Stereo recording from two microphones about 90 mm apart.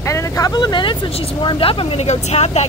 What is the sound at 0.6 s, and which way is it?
Speech, 55° left (ahead or behind).